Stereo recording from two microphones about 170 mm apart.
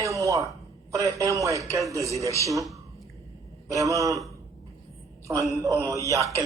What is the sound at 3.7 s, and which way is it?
Speech, 20° right (ahead or behind).